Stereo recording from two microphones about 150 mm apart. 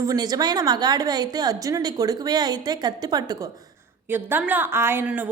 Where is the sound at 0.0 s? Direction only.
25° right (ahead or behind).